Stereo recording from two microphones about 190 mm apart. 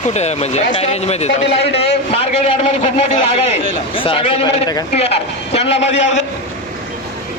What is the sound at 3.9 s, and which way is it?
A man's voice, 30° left (ahead or behind).